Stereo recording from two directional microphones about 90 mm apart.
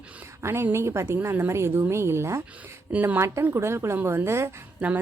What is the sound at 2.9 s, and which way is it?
Speech, 20° right (ahead or behind).